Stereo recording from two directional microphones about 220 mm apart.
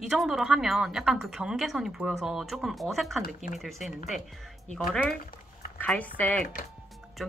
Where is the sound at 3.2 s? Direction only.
40° left (ahead or behind).